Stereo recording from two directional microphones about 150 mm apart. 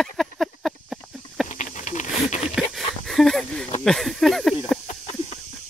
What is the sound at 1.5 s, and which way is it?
Patter, 60° left (ahead or behind).